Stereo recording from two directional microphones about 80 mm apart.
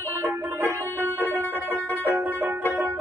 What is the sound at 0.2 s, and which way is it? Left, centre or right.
Music, right.